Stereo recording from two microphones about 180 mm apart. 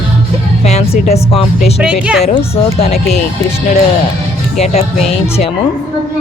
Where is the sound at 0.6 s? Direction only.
35° left (ahead or behind).